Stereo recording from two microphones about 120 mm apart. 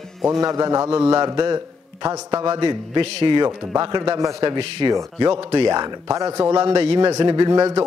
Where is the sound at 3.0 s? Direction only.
45° right (ahead or behind).